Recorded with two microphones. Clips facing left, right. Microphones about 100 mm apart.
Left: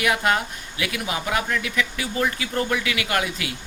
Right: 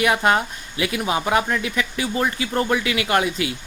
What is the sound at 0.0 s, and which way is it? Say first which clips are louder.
Speech: right 3 dB; 30° right (ahead or behind).